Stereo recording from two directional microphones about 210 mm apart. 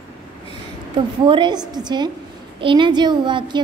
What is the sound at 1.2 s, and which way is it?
A woman's voice, 20° right (ahead or behind).